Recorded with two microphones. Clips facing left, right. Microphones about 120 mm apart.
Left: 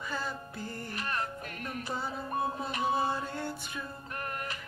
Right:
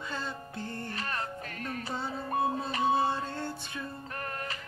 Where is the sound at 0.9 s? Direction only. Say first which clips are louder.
Left 3 dB; 35° right (ahead or behind).